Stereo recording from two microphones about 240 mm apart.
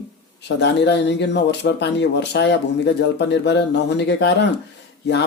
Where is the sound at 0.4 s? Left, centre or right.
Left.